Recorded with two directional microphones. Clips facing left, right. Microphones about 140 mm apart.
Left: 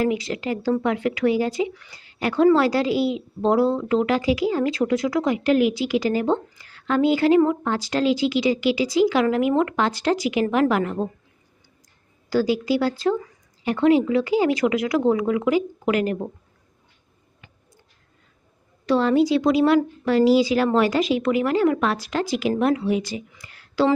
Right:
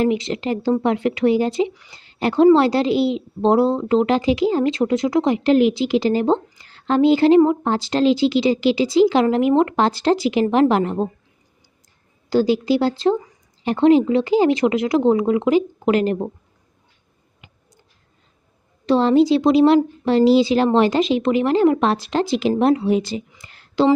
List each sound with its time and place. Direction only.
0.0 s speech: 25° right (ahead or behind)
12.3 s speech: 25° right (ahead or behind)
17.4 s a sound: 15° right (ahead or behind)
18.9 s speech: 25° right (ahead or behind)